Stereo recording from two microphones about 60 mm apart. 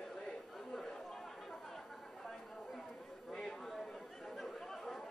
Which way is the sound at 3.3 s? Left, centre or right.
Centre.